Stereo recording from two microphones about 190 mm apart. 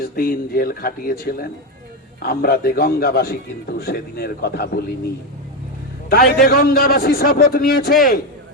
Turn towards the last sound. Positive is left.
turn(degrees=50)  # may be behind; listen again after turning